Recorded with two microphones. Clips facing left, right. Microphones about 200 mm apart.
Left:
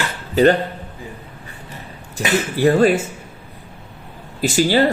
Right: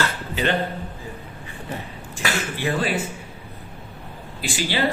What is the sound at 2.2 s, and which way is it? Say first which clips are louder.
Speech: left 9 dB; 40° left (ahead or behind).